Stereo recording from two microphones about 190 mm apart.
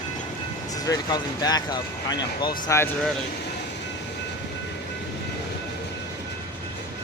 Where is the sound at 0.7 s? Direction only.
20° left (ahead or behind).